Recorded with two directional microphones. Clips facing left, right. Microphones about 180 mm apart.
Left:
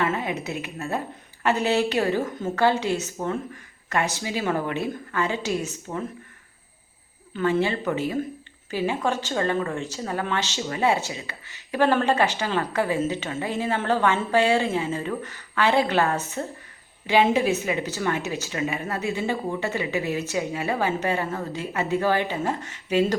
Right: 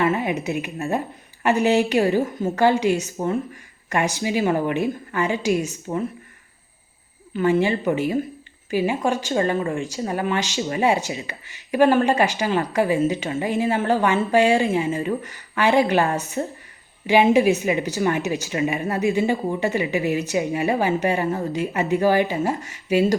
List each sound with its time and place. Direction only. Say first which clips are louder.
0.0 s speech: right 4 dB; 10° right (ahead or behind)
7.3 s speech: right 4 dB; 15° right (ahead or behind)